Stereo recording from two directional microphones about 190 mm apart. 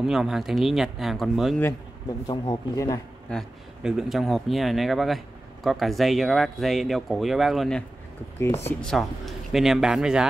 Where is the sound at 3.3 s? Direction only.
5° right (ahead or behind).